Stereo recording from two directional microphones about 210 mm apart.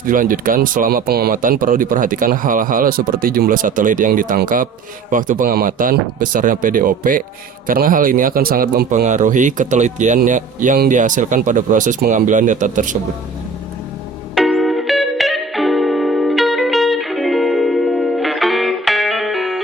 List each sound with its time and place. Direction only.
0.0 s speech: 40° right (ahead or behind)
14.3 s music: centre (ahead or behind)